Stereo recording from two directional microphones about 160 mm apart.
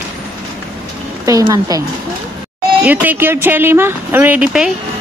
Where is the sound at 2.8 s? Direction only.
10° right (ahead or behind).